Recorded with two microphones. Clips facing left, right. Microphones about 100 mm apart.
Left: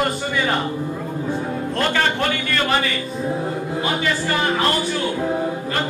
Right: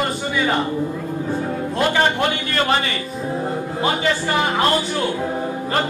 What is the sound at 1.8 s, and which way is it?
Speech, 20° right (ahead or behind).